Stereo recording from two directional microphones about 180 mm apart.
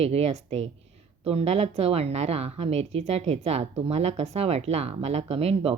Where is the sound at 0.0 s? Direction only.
35° right (ahead or behind).